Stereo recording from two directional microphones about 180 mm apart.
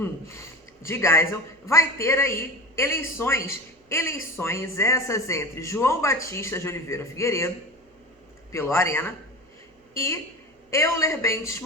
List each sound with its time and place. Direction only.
0.0 s speech: 15° left (ahead or behind)
8.5 s a woman's voice: 15° left (ahead or behind)